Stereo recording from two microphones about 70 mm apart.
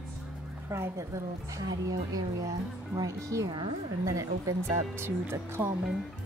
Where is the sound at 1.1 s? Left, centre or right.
Right.